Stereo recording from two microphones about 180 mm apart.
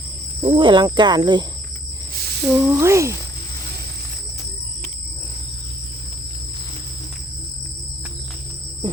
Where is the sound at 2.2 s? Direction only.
65° right (ahead or behind).